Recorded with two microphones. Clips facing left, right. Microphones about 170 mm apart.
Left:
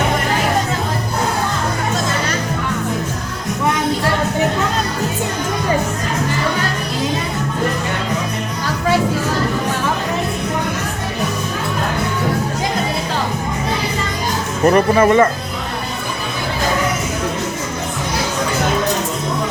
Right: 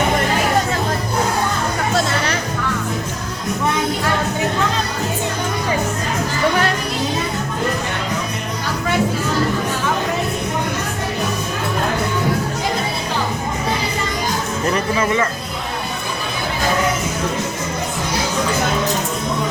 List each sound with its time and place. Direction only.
14.7 s speech: 50° left (ahead or behind)